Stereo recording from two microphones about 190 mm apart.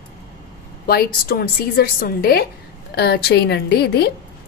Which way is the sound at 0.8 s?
55° left (ahead or behind).